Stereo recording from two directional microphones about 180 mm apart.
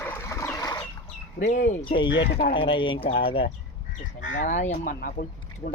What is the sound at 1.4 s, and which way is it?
Speech, 40° left (ahead or behind).